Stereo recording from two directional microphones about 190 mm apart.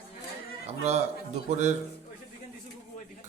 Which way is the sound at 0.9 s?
35° right (ahead or behind).